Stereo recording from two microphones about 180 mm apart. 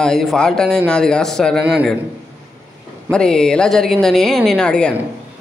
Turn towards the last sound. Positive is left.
turn(degrees=5)  # may be behind; listen again after turning